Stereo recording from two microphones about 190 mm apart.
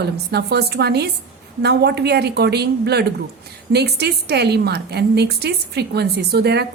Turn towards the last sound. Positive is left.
turn(degrees=-60)  # may be behind; listen again after turning